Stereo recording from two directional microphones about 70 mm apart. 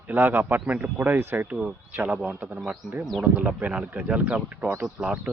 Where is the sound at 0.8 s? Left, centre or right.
Right.